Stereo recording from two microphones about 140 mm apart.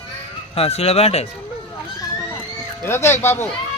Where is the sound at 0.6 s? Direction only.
45° left (ahead or behind).